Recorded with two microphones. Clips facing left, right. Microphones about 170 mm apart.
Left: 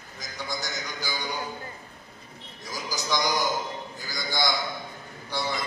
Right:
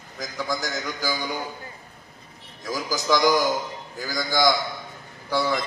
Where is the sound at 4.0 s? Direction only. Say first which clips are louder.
Right 8 dB; 45° right (ahead or behind).